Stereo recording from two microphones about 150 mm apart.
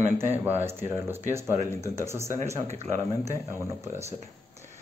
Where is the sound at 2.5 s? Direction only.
45° right (ahead or behind).